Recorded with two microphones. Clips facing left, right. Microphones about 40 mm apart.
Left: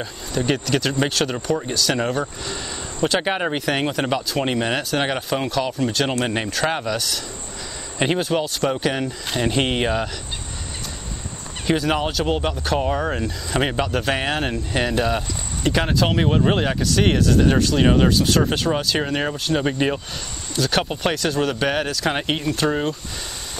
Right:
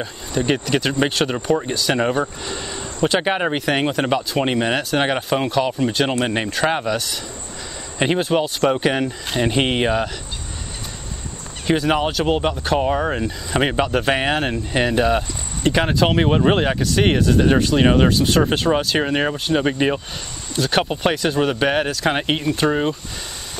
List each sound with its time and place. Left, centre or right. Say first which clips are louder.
0.0 s speech: right 2 dB; centre
11.6 s speech: right 2 dB; centre